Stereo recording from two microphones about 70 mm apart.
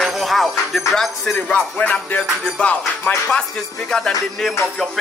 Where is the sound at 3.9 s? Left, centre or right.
Centre.